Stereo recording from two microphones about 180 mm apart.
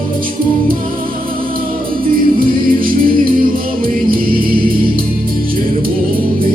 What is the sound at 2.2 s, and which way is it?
Music, 55° right (ahead or behind).